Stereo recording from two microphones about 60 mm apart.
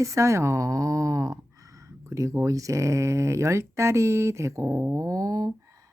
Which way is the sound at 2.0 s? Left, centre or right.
Right.